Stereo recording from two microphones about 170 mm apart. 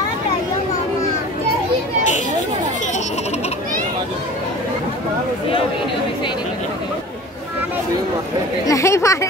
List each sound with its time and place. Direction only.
8.6 s speech: 15° left (ahead or behind)